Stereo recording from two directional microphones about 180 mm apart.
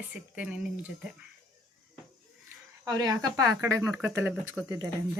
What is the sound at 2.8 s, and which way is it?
Speech, 20° right (ahead or behind).